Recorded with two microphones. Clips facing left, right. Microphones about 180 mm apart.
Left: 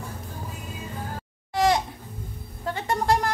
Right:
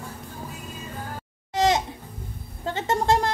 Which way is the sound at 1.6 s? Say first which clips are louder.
Even; 20° right (ahead or behind).